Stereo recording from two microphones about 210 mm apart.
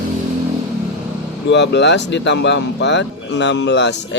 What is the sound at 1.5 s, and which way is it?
Speech, 55° left (ahead or behind).